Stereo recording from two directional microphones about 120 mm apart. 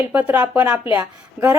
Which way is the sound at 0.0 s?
15° right (ahead or behind).